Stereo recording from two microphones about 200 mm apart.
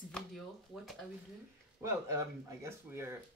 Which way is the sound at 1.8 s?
15° right (ahead or behind).